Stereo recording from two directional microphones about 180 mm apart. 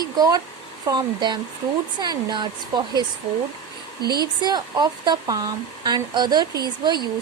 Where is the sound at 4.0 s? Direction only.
60° right (ahead or behind).